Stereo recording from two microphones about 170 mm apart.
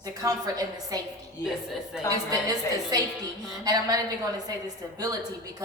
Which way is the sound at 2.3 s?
20° right (ahead or behind).